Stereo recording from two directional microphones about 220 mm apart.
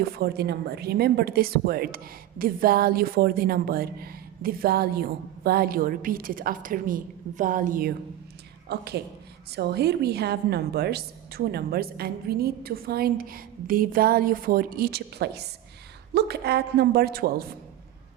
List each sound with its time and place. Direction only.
0.0 s a woman's voice: 45° right (ahead or behind)